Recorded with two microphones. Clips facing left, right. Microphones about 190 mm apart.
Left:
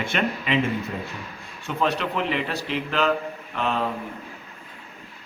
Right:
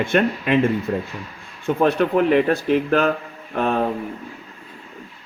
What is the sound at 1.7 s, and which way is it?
A man's voice, 55° right (ahead or behind).